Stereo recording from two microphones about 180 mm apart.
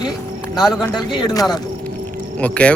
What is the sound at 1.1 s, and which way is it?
Speech, 25° left (ahead or behind).